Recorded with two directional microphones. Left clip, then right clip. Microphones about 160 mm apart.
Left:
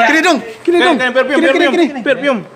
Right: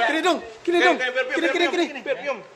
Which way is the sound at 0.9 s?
50° left (ahead or behind).